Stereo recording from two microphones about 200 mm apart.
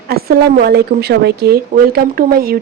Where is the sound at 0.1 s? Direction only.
50° right (ahead or behind).